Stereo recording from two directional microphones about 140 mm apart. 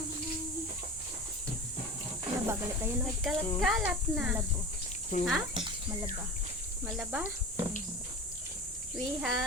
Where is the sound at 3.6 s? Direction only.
5° right (ahead or behind).